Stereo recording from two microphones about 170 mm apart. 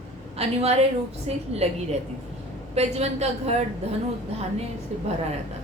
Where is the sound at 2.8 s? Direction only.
40° right (ahead or behind).